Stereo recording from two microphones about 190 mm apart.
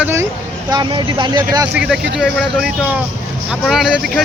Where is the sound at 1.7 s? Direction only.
5° right (ahead or behind).